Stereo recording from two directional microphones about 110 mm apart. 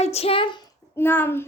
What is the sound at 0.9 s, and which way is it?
Speech, 20° left (ahead or behind).